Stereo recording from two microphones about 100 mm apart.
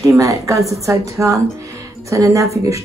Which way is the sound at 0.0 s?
30° right (ahead or behind).